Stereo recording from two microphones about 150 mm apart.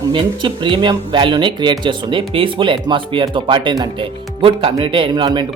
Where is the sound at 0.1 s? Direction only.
35° right (ahead or behind).